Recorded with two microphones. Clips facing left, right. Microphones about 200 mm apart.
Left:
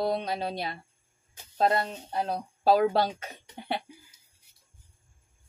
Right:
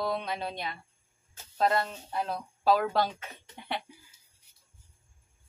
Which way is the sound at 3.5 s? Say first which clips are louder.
Left 3 dB; 35° left (ahead or behind).